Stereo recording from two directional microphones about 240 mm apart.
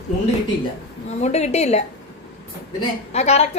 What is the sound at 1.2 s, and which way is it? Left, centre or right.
Speech, left.